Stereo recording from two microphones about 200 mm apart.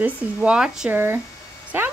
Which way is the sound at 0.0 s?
5° right (ahead or behind).